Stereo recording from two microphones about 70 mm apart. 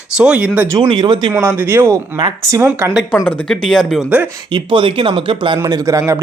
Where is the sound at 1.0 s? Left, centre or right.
Right.